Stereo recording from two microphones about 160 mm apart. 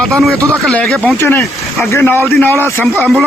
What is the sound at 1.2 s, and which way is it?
A man's voice, 15° left (ahead or behind).